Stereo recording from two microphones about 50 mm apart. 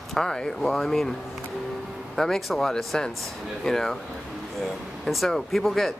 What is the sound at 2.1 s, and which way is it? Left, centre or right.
Speech, centre.